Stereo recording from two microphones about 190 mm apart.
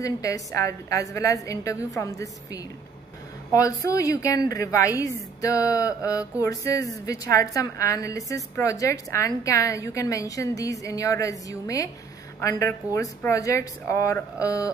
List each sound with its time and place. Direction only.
0.0 s a woman's voice: 15° left (ahead or behind)